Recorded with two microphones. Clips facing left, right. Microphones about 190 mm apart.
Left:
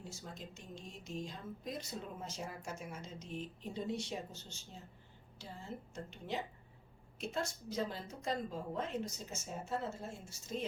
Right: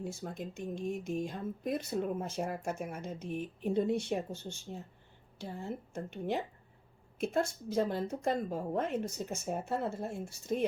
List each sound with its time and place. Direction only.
0.0 s speech: 60° right (ahead or behind)